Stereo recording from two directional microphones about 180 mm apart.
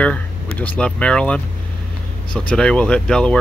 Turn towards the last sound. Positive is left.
turn(degrees=5)  # may be behind; listen again after turning